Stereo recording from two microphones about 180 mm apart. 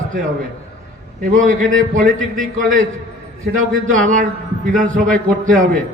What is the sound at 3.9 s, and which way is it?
A man's voice, 45° right (ahead or behind).